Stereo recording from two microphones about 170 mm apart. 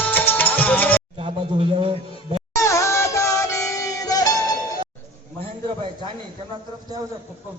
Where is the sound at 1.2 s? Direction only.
30° right (ahead or behind).